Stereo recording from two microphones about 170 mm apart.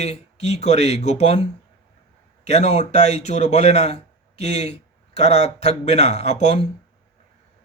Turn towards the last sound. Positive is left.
turn(degrees=40)  # may be behind; listen again after turning